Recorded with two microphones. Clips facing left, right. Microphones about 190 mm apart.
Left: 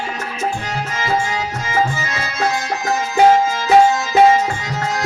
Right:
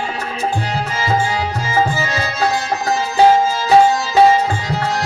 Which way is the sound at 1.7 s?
35° right (ahead or behind).